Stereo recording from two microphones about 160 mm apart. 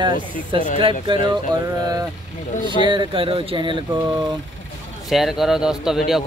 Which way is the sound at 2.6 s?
30° right (ahead or behind).